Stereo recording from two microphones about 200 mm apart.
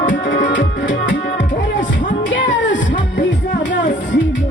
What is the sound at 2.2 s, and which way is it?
Music, 65° left (ahead or behind).